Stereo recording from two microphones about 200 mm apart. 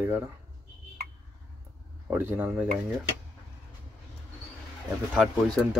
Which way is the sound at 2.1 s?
10° right (ahead or behind).